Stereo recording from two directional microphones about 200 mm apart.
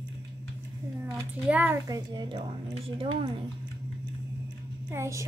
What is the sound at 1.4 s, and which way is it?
Speech, 10° right (ahead or behind).